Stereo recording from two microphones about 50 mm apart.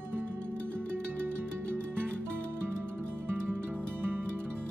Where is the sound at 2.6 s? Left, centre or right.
Right.